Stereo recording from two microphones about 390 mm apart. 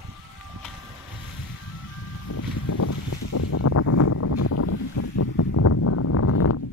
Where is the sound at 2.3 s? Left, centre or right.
Left.